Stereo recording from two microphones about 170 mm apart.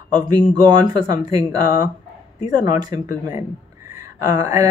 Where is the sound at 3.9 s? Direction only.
20° right (ahead or behind).